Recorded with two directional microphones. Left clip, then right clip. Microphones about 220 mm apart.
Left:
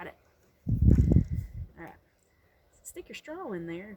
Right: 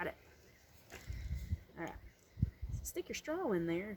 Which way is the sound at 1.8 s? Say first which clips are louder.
Right 1 dB; centre (ahead or behind).